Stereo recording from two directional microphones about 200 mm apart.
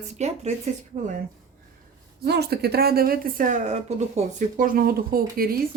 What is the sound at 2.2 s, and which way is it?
Speech, 55° right (ahead or behind).